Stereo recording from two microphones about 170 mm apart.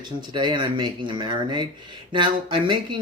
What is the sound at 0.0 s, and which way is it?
Speech, 25° right (ahead or behind).